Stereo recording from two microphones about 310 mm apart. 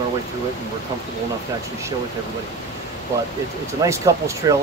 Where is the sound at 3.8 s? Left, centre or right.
Centre.